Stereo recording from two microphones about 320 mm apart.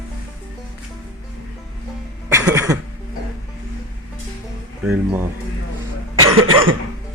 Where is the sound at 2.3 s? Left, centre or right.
Centre.